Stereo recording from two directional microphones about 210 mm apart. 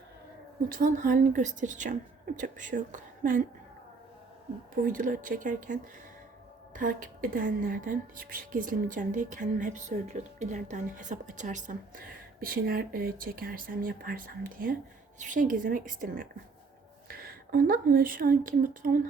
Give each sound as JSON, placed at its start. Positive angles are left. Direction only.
{"t": 0.7, "sound": "a woman's voice", "side_deg": -40}
{"t": 4.7, "sound": "a woman's voice", "side_deg": -40}